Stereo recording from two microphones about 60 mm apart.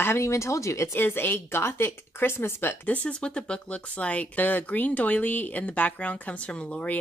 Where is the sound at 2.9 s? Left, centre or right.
Left.